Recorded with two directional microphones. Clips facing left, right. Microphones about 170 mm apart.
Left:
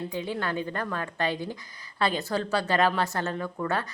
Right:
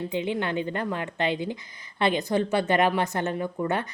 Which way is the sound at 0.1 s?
20° right (ahead or behind).